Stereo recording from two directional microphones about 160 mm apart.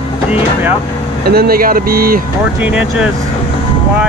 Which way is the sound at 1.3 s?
70° right (ahead or behind).